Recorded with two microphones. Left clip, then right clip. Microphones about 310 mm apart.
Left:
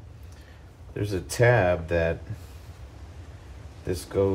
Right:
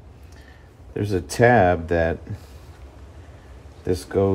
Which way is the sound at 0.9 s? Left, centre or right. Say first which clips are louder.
Right 4 dB; right.